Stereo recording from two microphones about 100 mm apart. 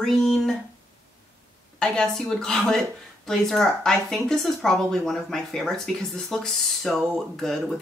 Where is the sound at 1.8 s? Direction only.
5° left (ahead or behind).